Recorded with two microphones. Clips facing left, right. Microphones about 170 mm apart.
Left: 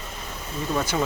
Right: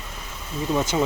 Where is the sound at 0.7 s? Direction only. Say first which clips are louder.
Right 2 dB; 20° right (ahead or behind).